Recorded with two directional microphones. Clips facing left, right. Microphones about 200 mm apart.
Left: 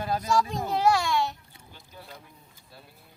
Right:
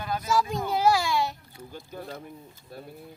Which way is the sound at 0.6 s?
Centre (ahead or behind).